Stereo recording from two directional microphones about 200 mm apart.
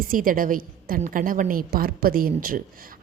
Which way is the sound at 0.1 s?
45° right (ahead or behind).